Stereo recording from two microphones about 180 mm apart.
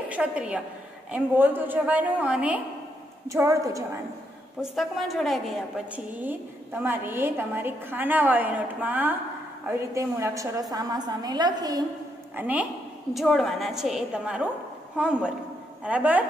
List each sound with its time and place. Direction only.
0.1 s a woman's voice: 5° right (ahead or behind)
4.6 s a woman's voice: centre (ahead or behind); by 11.8 s 20° right (ahead or behind)
12.4 s a woman's voice: 10° right (ahead or behind)